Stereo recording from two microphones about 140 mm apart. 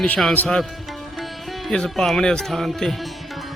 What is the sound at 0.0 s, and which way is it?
Speech, 5° left (ahead or behind).